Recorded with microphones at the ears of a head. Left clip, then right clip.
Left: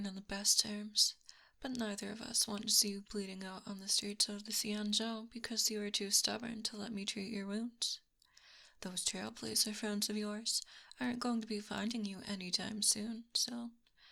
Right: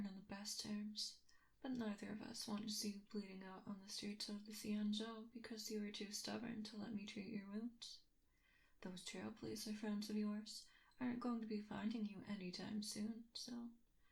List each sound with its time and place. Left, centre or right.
0.0 s speech: left